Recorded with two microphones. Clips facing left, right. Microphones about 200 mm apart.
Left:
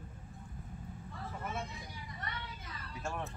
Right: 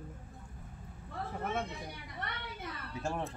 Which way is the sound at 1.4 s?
60° right (ahead or behind).